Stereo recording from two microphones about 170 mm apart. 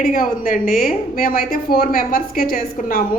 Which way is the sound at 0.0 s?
55° left (ahead or behind).